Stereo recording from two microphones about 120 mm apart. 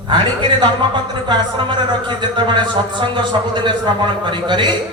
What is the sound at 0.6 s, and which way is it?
Speech, 40° right (ahead or behind).